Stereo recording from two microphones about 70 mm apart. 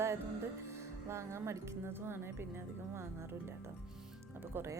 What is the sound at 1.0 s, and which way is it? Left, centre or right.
A woman's voice, right.